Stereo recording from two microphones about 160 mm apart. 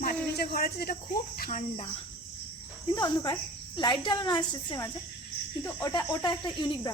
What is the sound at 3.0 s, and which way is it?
Cricket, 25° left (ahead or behind).